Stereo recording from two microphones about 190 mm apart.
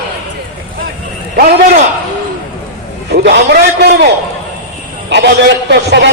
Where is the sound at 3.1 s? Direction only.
60° right (ahead or behind).